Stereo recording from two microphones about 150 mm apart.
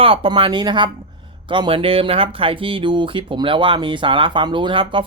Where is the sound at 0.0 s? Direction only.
35° right (ahead or behind).